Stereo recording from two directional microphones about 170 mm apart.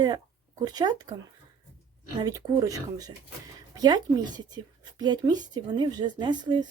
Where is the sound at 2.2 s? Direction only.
20° right (ahead or behind).